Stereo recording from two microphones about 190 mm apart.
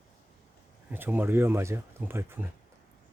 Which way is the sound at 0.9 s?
10° right (ahead or behind).